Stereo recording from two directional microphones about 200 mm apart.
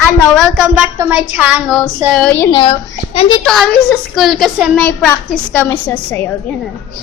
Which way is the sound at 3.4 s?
Centre (ahead or behind).